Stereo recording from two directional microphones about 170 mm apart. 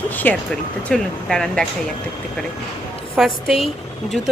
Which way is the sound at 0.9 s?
5° left (ahead or behind).